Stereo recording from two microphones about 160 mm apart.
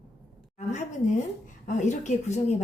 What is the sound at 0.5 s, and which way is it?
A woman's voice, 45° left (ahead or behind).